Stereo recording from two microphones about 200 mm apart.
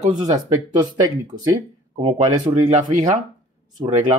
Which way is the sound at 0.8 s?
20° right (ahead or behind).